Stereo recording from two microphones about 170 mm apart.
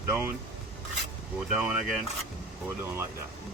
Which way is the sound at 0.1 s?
10° right (ahead or behind).